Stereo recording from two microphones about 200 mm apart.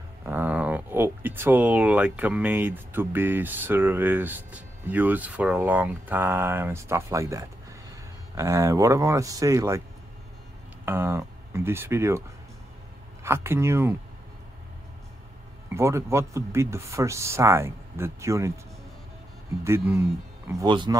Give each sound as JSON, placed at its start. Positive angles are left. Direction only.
{"t": 0.2, "sound": "speech", "side_deg": -10}
{"t": 10.9, "sound": "speech", "side_deg": -10}
{"t": 13.2, "sound": "speech", "side_deg": -15}
{"t": 15.7, "sound": "speech", "side_deg": -15}
{"t": 19.6, "sound": "speech", "side_deg": -15}